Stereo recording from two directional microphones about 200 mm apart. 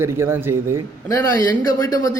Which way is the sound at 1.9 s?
15° left (ahead or behind).